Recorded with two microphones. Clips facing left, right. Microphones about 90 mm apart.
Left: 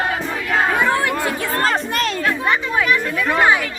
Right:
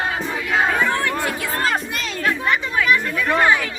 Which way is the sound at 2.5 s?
30° left (ahead or behind).